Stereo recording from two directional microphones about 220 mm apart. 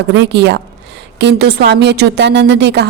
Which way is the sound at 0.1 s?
50° right (ahead or behind).